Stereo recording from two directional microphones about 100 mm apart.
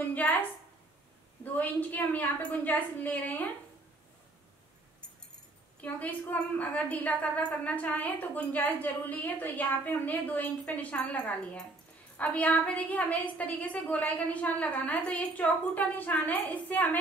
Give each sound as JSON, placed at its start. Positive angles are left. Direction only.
{"t": 0.1, "sound": "a woman's voice", "side_deg": 15}
{"t": 5.8, "sound": "a woman's voice", "side_deg": 15}